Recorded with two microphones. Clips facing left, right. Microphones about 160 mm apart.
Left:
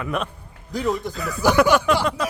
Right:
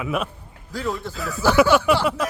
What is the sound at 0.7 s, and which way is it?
Speech, 20° left (ahead or behind).